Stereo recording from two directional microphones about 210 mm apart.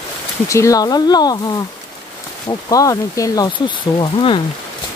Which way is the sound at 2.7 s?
15° left (ahead or behind).